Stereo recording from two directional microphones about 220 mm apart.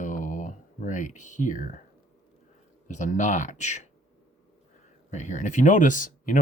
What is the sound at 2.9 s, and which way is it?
Speech, 35° left (ahead or behind).